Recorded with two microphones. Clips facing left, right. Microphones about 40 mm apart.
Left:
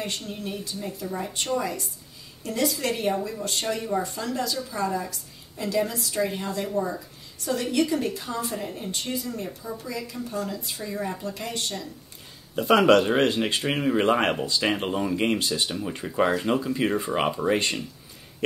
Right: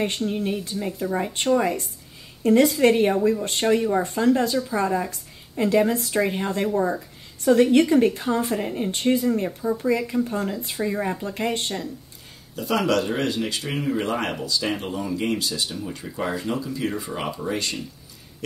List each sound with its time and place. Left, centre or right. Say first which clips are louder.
0.0 s speech: right 8 dB; right
12.5 s speech: left 4 dB; left
13.6 s speech: left 2 dB; left
15.7 s speech: left 2 dB; left